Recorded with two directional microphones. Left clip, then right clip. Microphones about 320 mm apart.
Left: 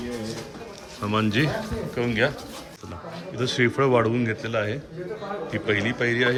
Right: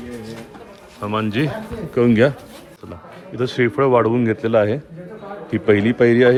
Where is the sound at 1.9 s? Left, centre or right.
Centre.